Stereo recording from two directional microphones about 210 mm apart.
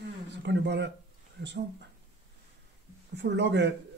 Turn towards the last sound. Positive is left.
turn(degrees=-55)  # may be behind; listen again after turning